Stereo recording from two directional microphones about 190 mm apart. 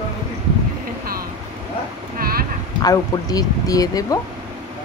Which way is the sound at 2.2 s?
50° right (ahead or behind).